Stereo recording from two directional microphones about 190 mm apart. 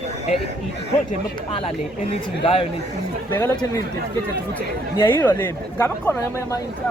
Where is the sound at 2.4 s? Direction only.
30° left (ahead or behind).